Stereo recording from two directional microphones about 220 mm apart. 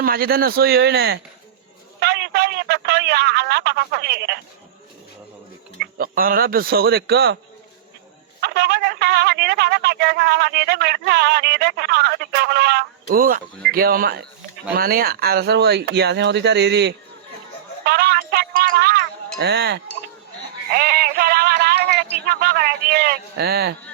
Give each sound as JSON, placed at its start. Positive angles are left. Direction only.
{"t": 0.0, "sound": "a man's voice", "side_deg": -40}
{"t": 5.8, "sound": "speech", "side_deg": -40}
{"t": 8.4, "sound": "a man's voice", "side_deg": -50}
{"t": 17.8, "sound": "music", "side_deg": -45}
{"t": 22.3, "sound": "speech", "side_deg": -45}